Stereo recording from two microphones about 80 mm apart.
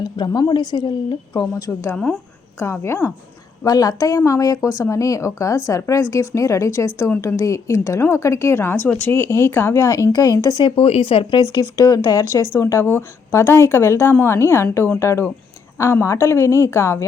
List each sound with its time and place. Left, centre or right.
0.0 s a woman's voice: left
1.3 s speech: left
3.6 s speech: left
10.5 s speech: left
11.5 s speech: left
12.5 s speech: left